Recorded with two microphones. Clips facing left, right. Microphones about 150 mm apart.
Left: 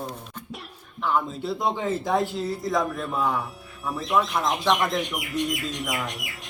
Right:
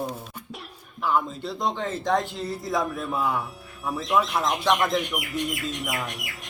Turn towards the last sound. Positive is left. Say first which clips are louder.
# left 1 dB
turn(degrees=0)  # may be behind; listen again after turning